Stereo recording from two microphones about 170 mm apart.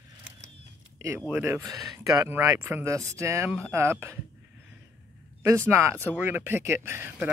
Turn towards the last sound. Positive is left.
turn(degrees=-10)  # may be behind; listen again after turning